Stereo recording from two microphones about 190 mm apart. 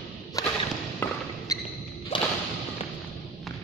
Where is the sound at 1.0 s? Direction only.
10° left (ahead or behind).